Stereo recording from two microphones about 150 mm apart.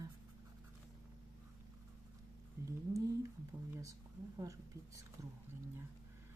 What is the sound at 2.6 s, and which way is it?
Speech, 20° right (ahead or behind).